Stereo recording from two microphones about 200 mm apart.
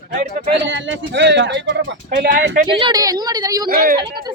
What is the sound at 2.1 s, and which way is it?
Music, 45° right (ahead or behind).